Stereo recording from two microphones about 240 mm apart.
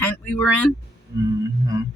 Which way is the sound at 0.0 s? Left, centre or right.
Centre.